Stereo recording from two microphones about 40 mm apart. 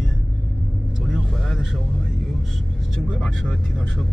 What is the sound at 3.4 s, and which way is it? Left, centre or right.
Vehicle, centre.